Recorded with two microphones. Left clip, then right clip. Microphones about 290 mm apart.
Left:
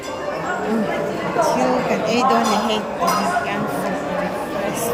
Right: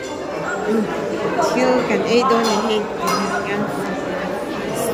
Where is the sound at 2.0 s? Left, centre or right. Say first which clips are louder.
Even; centre.